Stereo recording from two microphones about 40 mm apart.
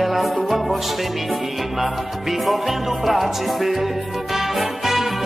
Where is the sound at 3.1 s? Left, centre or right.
Centre.